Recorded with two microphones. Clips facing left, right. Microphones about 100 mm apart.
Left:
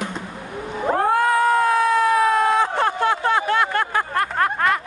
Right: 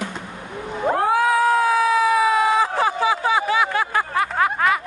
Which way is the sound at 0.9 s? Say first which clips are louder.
Left 1 dB; centre (ahead or behind).